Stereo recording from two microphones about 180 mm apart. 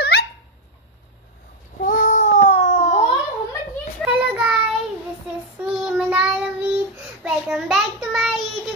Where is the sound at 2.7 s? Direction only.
45° left (ahead or behind).